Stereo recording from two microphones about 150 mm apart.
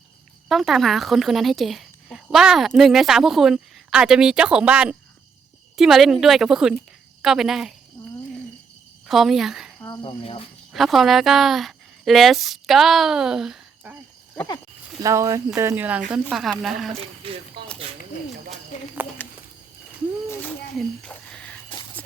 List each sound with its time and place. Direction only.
0.4 s speech: centre (ahead or behind)
9.0 s a woman's voice: centre (ahead or behind)
10.0 s speech: 35° left (ahead or behind)
10.7 s a woman's voice: centre (ahead or behind)
14.3 s speech: 25° left (ahead or behind)
15.0 s speech: 20° right (ahead or behind)
16.3 s speech: centre (ahead or behind)
17.2 s speech: 35° right (ahead or behind)
18.7 s speech: 55° left (ahead or behind)
20.7 s a sound: 5° left (ahead or behind)